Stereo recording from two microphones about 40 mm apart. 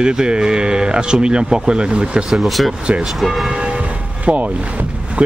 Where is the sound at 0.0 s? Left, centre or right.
Right.